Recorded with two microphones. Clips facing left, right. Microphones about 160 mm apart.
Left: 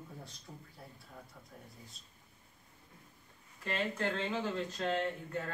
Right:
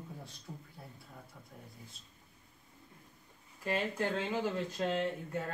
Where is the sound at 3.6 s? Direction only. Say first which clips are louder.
Right 2 dB; 10° right (ahead or behind).